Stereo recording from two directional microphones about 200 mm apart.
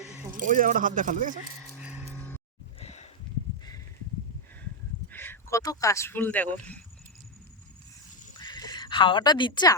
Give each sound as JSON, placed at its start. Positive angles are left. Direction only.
{"t": 0.3, "sound": "a man's voice", "side_deg": -40}
{"t": 1.8, "sound": "music", "side_deg": -5}
{"t": 2.1, "sound": "music", "side_deg": 10}
{"t": 2.8, "sound": "a sound", "side_deg": 35}
{"t": 5.1, "sound": "speech", "side_deg": 10}
{"t": 8.4, "sound": "bleat", "side_deg": 20}